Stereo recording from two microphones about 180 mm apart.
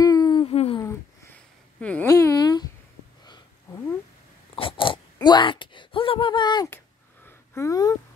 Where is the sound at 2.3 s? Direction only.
25° left (ahead or behind).